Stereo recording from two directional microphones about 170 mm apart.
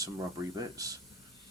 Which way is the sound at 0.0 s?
20° right (ahead or behind).